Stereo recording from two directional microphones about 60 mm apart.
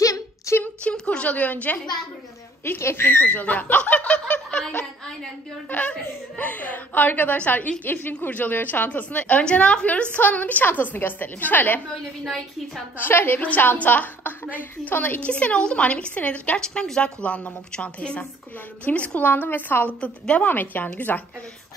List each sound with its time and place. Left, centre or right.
0.0 s a sound: left
0.8 s a woman's voice: centre
2.6 s a woman's voice: left
3.3 s a woman's voice: left
4.1 s fowl: centre
5.7 s a woman's voice: left
12.3 s a woman's voice: centre
13.0 s a woman's voice: left
20.0 s a woman's voice: left
20.4 s a woman's voice: left